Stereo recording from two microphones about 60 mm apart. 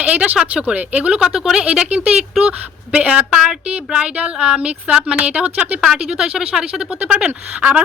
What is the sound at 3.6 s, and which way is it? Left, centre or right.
Speech, right.